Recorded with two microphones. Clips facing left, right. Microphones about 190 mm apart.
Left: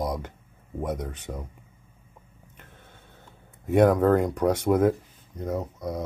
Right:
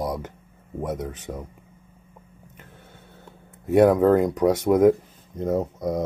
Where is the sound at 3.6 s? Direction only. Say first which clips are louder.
Right 3 dB; 10° right (ahead or behind).